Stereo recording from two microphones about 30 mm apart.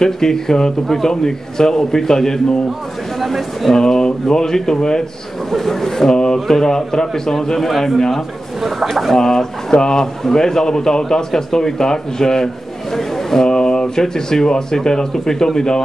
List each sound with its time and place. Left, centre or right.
0.0 s a man's voice: centre
3.2 s speech: centre
3.7 s speech: centre
5.5 s a man's voice: centre
6.1 s a sound: left
6.4 s speech: centre
8.5 s speech: centre
9.2 s speech: centre
13.5 s speech: left